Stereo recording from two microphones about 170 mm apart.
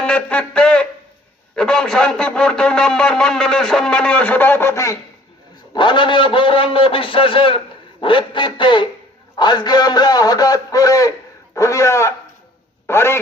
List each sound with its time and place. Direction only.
0.0 s a sound: 5° left (ahead or behind)
1.5 s a man's voice: 5° left (ahead or behind)
5.7 s a man's voice: 30° left (ahead or behind)